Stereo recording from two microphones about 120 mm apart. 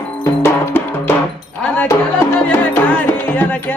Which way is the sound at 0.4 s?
20° left (ahead or behind).